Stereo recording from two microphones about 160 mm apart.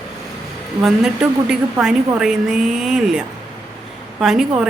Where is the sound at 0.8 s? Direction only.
5° right (ahead or behind).